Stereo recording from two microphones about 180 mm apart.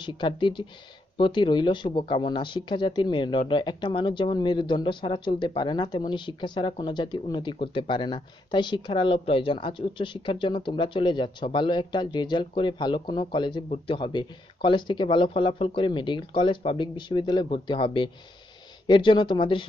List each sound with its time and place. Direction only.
0.0 s speech: 25° left (ahead or behind)